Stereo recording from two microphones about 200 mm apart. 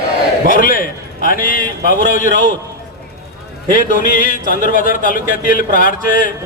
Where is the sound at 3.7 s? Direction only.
45° left (ahead or behind).